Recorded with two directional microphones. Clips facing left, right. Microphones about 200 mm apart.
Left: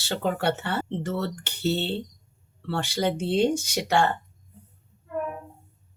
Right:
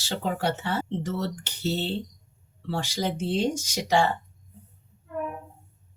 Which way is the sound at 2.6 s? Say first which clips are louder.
Left 2 dB; 60° left (ahead or behind).